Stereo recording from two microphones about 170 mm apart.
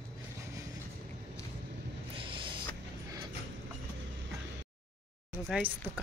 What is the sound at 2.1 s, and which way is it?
Music, 30° right (ahead or behind).